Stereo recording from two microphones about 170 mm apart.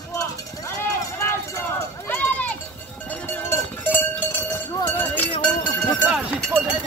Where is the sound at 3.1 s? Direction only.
10° left (ahead or behind).